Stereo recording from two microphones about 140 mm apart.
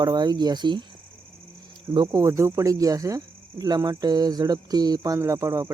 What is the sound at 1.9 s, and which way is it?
Speech, 25° right (ahead or behind).